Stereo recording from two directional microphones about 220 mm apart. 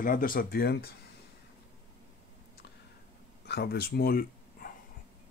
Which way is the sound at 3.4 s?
45° left (ahead or behind).